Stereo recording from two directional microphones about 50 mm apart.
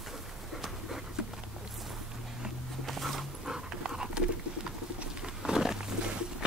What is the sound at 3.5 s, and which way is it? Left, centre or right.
Dog, centre.